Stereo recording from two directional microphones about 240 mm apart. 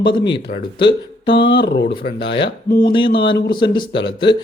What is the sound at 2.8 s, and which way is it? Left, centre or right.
Speech, centre.